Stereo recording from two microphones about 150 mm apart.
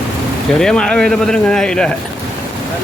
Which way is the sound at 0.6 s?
5° left (ahead or behind).